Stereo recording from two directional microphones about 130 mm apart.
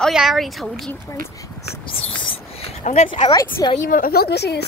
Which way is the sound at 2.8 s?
70° left (ahead or behind).